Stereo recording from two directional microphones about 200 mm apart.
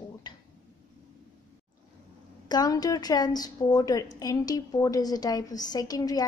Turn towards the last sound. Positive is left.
turn(degrees=20)  # may be behind; listen again after turning